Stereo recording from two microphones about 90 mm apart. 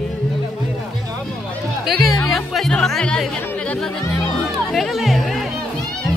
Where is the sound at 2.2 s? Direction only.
Centre (ahead or behind).